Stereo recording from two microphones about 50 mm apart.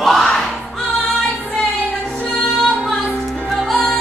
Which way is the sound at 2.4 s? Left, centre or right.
Centre.